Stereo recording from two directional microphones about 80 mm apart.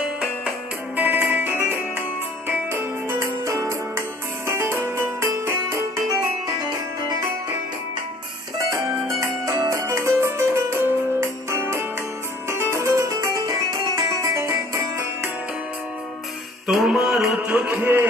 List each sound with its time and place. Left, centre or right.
0.0 s music: centre
0.9 s music: right
9.2 s music: right
16.6 s music: centre
17.5 s a sound: centre